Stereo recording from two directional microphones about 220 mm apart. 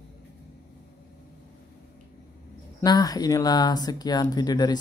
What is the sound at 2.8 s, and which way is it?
Speech, 15° left (ahead or behind).